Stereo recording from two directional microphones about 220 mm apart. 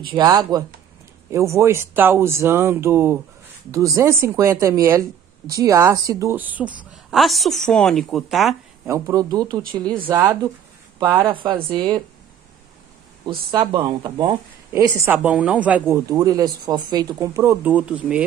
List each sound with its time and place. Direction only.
0.1 s speech: 20° right (ahead or behind); by 8.5 s centre (ahead or behind)
8.8 s speech: 15° right (ahead or behind)
11.0 s speech: 20° right (ahead or behind)
13.2 s speech: 20° right (ahead or behind)